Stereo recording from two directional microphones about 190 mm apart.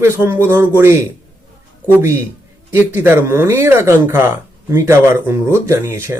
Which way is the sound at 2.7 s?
10° right (ahead or behind).